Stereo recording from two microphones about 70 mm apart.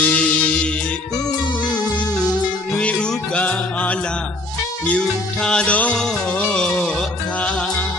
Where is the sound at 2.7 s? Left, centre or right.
Centre.